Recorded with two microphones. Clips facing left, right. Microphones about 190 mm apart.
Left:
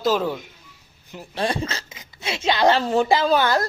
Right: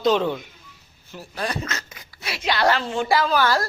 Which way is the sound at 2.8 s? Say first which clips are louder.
Left 6 dB; 40° left (ahead or behind).